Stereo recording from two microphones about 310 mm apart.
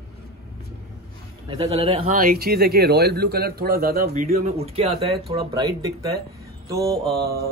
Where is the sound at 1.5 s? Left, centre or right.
Centre.